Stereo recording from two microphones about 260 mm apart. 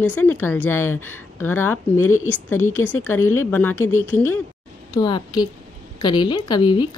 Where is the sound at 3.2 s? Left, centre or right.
Left.